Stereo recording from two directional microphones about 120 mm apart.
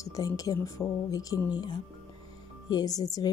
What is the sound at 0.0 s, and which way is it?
Speech, 30° left (ahead or behind).